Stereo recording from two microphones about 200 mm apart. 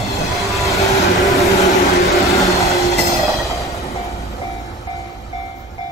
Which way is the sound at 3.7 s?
15° left (ahead or behind).